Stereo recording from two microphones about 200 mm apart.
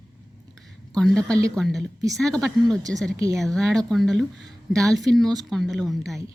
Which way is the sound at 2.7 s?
20° right (ahead or behind).